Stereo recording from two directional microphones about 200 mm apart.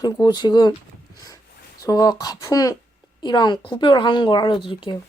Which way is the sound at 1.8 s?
20° left (ahead or behind).